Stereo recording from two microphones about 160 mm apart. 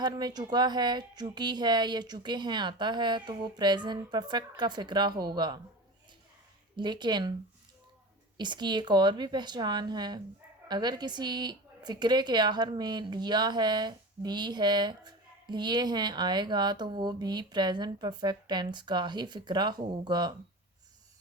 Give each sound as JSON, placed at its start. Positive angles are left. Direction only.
{"t": 0.0, "sound": "a woman's voice", "side_deg": -25}
{"t": 6.7, "sound": "a woman's voice", "side_deg": -30}
{"t": 8.4, "sound": "a woman's voice", "side_deg": -30}